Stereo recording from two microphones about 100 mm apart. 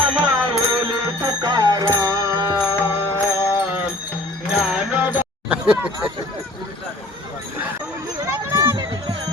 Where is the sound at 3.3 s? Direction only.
35° left (ahead or behind).